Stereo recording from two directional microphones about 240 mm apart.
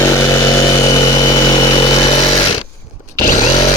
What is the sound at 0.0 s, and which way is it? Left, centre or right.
Vehicle, centre.